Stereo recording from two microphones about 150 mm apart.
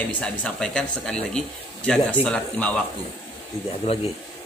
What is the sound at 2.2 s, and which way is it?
Speech, 5° left (ahead or behind).